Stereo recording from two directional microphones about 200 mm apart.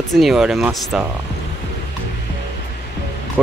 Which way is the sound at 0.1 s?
Centre (ahead or behind).